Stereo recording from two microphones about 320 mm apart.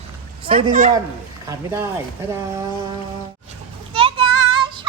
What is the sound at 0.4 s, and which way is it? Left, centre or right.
Speech, right.